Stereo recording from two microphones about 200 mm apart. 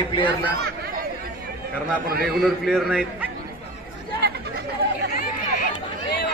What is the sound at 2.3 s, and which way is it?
Speech, centre (ahead or behind).